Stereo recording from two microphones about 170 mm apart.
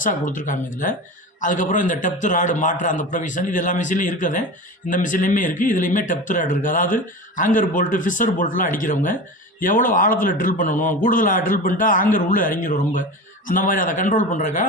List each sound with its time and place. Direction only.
0.0 s speech: 50° left (ahead or behind)